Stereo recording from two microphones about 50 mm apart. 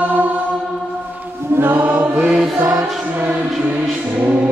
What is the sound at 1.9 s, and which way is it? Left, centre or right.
Chant, centre.